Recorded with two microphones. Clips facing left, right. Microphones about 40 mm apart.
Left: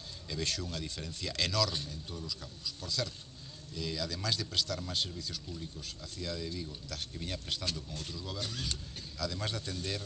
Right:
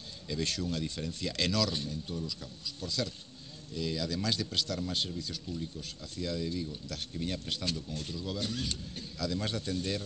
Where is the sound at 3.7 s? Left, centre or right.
Right.